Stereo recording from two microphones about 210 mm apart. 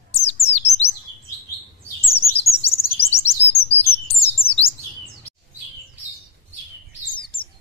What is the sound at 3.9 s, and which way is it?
Chirp, 30° left (ahead or behind).